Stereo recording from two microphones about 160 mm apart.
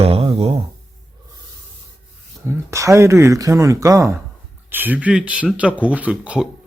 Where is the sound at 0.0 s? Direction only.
40° right (ahead or behind).